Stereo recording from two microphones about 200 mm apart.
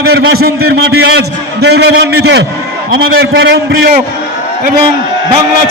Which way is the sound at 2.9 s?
90° right.